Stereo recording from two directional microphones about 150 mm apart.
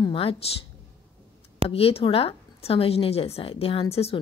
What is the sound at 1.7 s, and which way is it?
A woman's voice, 40° left (ahead or behind).